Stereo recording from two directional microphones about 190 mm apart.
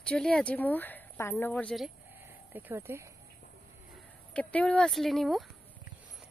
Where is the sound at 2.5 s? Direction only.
10° right (ahead or behind).